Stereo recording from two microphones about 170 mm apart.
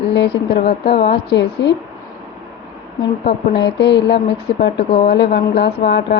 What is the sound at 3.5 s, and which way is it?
Speech, 90° left.